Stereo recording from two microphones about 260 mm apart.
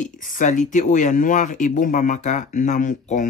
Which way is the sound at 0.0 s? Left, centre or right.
Left.